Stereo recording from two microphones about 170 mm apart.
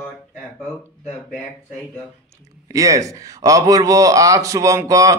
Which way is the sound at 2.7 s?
20° right (ahead or behind).